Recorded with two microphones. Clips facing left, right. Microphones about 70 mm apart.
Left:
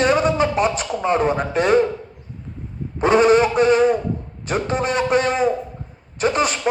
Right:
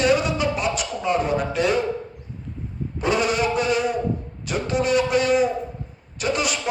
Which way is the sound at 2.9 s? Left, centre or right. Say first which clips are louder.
Left 8 dB; left.